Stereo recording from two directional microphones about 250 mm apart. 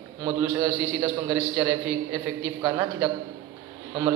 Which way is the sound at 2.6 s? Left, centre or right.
Centre.